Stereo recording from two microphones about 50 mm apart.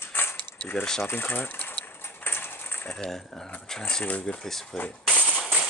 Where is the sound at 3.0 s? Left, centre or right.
Centre.